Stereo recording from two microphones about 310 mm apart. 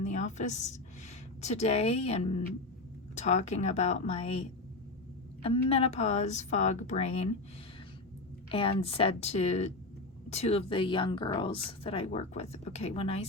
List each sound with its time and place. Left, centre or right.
0.0 s a woman's voice: left
8.4 s speech: centre